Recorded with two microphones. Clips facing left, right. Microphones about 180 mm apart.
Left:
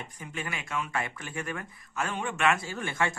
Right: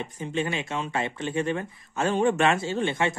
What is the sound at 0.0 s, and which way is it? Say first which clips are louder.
Speech: right 9 dB; 25° right (ahead or behind).